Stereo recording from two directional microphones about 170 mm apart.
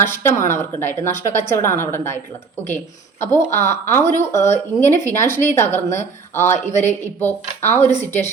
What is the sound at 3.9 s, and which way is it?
Speech, 15° left (ahead or behind).